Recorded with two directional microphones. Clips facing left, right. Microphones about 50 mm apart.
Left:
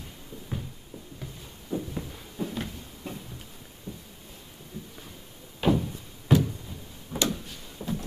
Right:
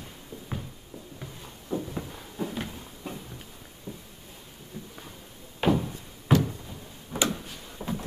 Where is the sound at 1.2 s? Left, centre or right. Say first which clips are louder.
Even; centre.